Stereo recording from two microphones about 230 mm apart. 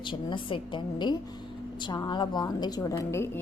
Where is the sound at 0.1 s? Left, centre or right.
Left.